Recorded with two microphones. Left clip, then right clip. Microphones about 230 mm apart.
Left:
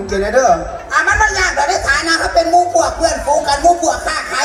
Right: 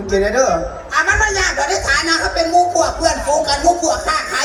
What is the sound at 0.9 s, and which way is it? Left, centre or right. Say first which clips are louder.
A man's voice: left 2 dB; centre.